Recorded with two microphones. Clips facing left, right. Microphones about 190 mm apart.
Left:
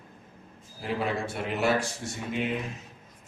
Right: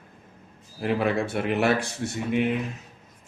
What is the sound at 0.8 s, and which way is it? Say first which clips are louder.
A man's voice: right 6 dB; 60° right (ahead or behind).